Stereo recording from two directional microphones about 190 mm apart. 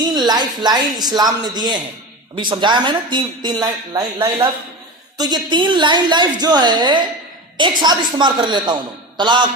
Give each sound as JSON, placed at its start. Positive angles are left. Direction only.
{"t": 0.0, "sound": "a man's voice", "side_deg": -20}